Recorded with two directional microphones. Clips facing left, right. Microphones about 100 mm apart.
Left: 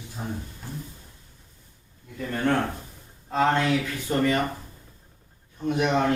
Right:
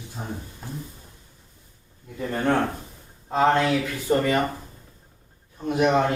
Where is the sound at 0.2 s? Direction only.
10° right (ahead or behind).